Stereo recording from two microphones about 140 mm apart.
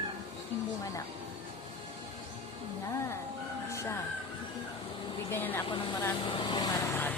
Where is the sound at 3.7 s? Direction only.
20° left (ahead or behind).